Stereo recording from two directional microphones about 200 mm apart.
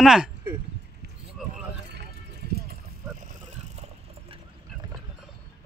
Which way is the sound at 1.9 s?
55° right (ahead or behind).